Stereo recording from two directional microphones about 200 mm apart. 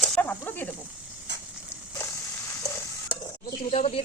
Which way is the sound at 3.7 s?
35° left (ahead or behind).